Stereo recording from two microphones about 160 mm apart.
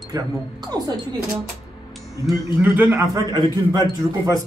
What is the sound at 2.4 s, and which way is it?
A man's voice, 10° right (ahead or behind).